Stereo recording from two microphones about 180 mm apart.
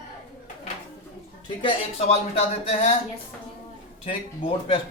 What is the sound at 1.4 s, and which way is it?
A man's voice, 30° left (ahead or behind).